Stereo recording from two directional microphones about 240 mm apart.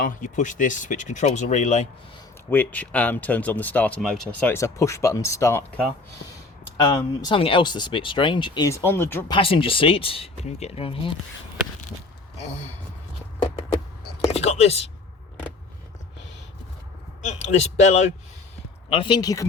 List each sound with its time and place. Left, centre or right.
0.0 s speech: left
2.5 s speech: centre
6.9 s speech: centre
9.3 s speech: left
14.3 s a sound: left
17.2 s speech: left